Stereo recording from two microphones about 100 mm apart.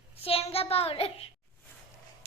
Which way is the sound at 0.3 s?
80° left.